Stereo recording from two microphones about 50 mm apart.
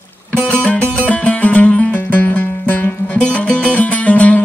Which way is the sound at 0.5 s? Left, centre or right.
Left.